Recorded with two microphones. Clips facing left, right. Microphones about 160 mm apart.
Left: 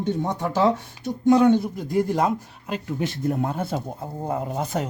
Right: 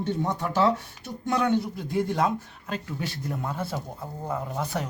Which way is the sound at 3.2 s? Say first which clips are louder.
Left 8 dB; 50° left (ahead or behind).